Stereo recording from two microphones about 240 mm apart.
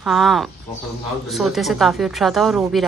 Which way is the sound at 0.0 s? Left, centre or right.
Centre.